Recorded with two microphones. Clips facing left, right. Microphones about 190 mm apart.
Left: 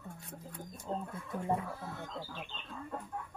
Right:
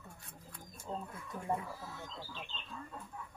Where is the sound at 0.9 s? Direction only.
40° left (ahead or behind).